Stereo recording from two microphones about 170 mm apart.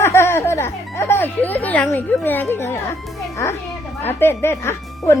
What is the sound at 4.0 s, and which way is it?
Speech, 15° left (ahead or behind).